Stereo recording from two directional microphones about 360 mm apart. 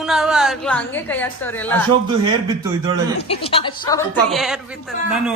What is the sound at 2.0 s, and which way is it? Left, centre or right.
Speech, centre.